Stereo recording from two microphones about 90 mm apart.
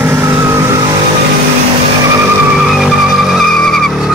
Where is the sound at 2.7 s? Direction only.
5° right (ahead or behind).